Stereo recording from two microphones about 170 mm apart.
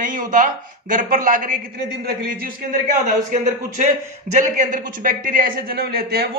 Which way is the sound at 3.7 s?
45° right (ahead or behind).